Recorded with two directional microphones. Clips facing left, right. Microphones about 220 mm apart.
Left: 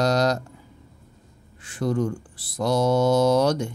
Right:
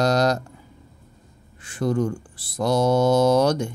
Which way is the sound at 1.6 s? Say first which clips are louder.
Right 2 dB; 50° right (ahead or behind).